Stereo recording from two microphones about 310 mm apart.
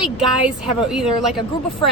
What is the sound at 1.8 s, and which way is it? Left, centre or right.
Speech, centre.